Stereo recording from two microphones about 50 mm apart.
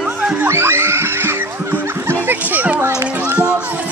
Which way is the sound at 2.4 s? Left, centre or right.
Right.